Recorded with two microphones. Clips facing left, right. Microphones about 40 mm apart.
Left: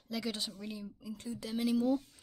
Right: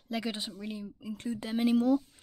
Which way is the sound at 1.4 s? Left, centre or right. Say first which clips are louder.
Right 5 dB; right.